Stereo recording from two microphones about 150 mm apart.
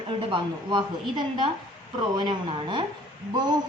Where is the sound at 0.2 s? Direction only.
35° right (ahead or behind).